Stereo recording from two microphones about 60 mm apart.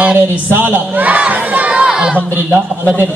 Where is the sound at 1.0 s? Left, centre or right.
Right.